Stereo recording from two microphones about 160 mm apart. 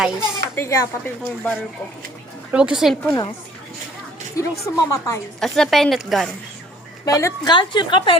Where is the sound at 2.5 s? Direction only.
5° right (ahead or behind).